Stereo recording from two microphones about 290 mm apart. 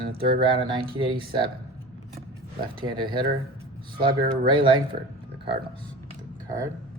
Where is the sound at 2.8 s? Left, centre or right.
Centre.